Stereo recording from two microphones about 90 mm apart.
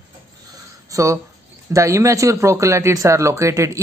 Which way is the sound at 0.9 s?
35° right (ahead or behind).